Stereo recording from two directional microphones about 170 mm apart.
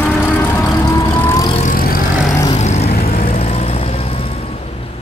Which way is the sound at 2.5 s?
40° left (ahead or behind).